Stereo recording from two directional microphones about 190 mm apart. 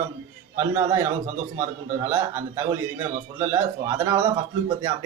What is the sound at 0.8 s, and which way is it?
Speech, 15° right (ahead or behind).